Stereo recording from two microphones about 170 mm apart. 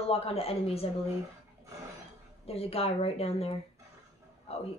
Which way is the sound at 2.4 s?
35° left (ahead or behind).